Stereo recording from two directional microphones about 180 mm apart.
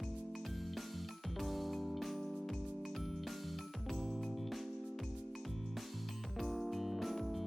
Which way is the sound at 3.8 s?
Centre (ahead or behind).